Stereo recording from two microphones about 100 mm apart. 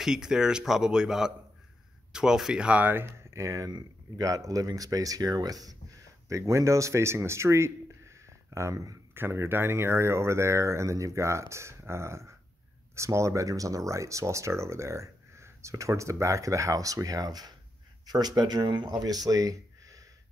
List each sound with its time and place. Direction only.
0.0 s a man's voice: 5° right (ahead or behind); by 20.0 s 35° right (ahead or behind)